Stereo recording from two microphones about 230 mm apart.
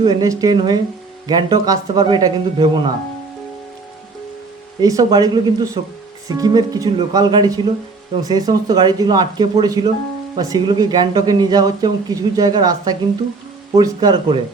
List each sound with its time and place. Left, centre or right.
0.0 s speech: centre
4.8 s speech: centre